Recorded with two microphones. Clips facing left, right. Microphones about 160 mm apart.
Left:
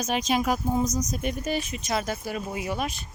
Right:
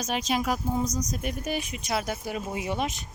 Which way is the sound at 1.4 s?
15° right (ahead or behind).